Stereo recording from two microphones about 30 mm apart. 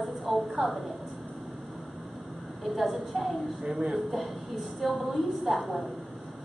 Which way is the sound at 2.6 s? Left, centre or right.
Centre.